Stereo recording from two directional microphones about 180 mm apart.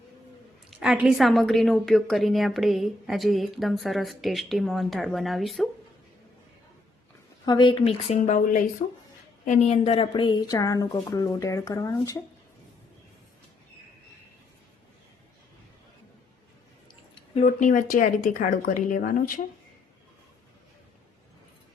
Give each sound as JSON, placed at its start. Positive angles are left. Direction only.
{"t": 0.8, "sound": "a woman's voice", "side_deg": -5}
{"t": 7.4, "sound": "a woman's voice", "side_deg": 25}
{"t": 17.3, "sound": "speech", "side_deg": 45}